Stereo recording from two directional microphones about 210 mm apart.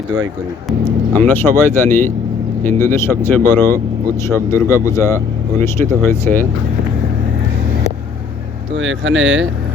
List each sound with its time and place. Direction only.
0.9 s speech: 10° left (ahead or behind)
8.7 s speech: 65° right (ahead or behind)